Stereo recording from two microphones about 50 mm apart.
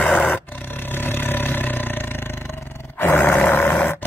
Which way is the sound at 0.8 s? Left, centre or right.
Left.